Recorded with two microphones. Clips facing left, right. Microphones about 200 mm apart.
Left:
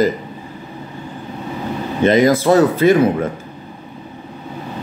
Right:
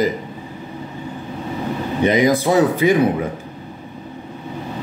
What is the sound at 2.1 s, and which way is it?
A man's voice, 15° right (ahead or behind).